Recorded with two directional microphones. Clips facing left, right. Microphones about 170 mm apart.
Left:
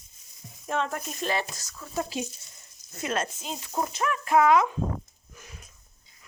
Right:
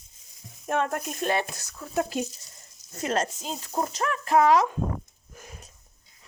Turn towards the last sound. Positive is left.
turn(degrees=-40)  # may be behind; listen again after turning